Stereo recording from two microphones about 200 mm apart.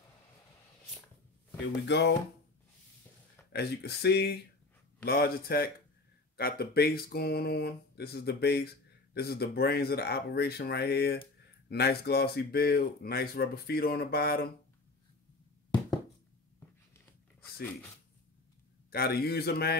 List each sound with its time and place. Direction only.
1.9 s speech: 60° left (ahead or behind)
3.5 s speech: 55° left (ahead or behind)
16.5 s a sound: 10° left (ahead or behind)
18.9 s speech: 50° left (ahead or behind)